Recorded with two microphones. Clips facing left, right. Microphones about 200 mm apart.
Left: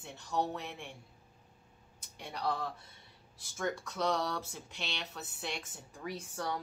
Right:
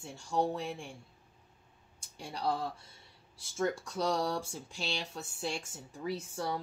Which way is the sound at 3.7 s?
30° right (ahead or behind).